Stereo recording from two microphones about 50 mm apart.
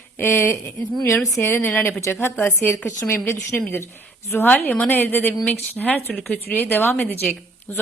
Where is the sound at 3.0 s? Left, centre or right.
Left.